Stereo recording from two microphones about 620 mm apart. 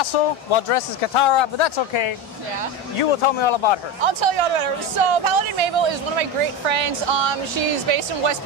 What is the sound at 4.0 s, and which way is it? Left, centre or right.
Speech, right.